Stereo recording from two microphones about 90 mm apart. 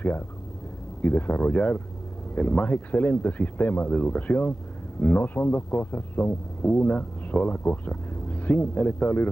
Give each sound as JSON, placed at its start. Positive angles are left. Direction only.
{"t": 1.0, "sound": "speech", "side_deg": 15}